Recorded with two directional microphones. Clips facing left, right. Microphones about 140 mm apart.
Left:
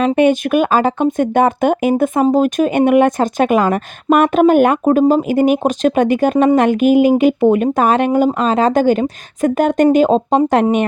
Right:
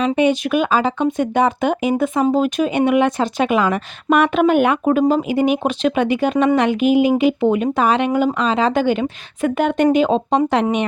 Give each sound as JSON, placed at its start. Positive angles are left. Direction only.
{"t": 0.2, "sound": "speech", "side_deg": 50}